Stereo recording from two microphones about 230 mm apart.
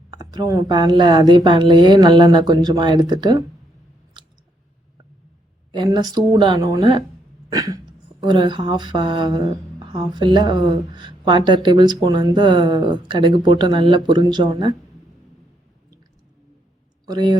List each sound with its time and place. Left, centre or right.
0.1 s a woman's voice: centre
5.7 s a woman's voice: centre
7.5 s a sound: centre
8.2 s a woman's voice: centre
17.1 s a woman's voice: centre